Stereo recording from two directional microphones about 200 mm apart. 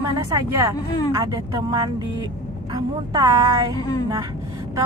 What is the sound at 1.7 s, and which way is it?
A woman's voice, 20° right (ahead or behind).